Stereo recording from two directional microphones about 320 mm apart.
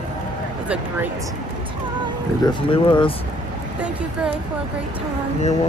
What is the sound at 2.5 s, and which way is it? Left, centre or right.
Speech, centre.